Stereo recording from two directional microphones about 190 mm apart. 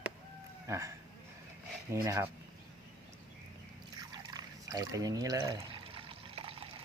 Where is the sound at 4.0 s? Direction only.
20° right (ahead or behind).